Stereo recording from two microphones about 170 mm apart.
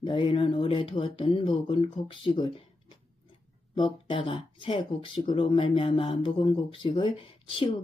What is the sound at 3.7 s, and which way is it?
Speech, 30° left (ahead or behind).